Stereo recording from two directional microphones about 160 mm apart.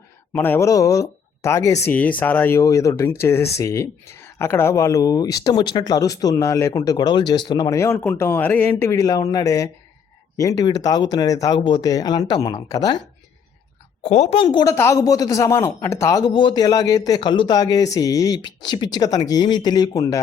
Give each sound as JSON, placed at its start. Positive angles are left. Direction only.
{"t": 0.3, "sound": "speech", "side_deg": 15}
{"t": 14.0, "sound": "a woman's voice", "side_deg": 40}
{"t": 14.5, "sound": "speech", "side_deg": 20}